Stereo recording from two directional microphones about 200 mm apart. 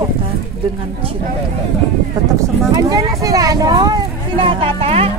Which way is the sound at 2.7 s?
20° right (ahead or behind).